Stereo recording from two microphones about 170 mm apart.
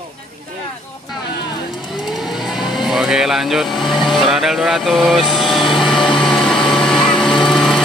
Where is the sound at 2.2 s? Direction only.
Centre (ahead or behind).